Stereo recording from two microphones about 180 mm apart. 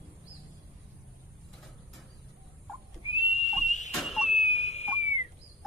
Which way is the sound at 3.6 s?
40° left (ahead or behind).